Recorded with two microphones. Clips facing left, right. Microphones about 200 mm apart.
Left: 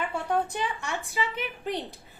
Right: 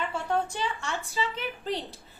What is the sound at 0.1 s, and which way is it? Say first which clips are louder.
A woman's voice: left 1 dB; 15° left (ahead or behind).